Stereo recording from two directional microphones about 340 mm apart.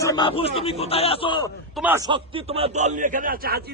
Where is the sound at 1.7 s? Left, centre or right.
Centre.